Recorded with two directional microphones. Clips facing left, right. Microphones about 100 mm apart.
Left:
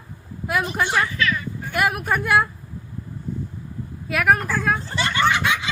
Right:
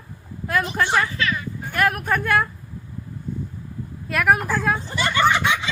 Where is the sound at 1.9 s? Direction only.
10° left (ahead or behind).